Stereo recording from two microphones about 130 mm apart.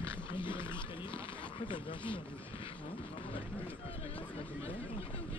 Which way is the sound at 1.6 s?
40° left (ahead or behind).